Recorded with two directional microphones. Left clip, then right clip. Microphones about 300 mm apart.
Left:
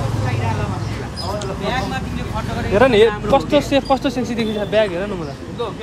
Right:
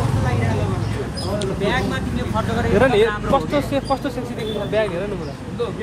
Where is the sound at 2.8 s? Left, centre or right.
Left.